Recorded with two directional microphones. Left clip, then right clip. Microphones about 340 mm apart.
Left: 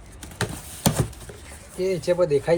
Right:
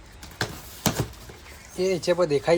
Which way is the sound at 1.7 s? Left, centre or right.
Centre.